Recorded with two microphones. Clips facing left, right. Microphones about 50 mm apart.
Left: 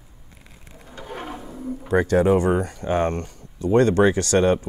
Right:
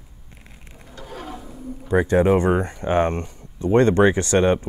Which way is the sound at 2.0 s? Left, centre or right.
Right.